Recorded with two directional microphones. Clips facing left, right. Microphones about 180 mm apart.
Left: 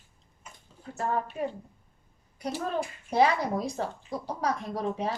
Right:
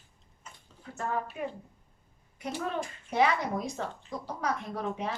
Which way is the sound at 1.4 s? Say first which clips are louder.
Left 4 dB; 35° left (ahead or behind).